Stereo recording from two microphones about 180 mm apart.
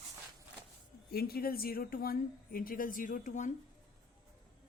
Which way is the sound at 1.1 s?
60° left (ahead or behind).